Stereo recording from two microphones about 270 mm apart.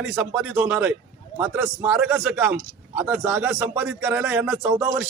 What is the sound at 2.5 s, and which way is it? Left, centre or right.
Speech, right.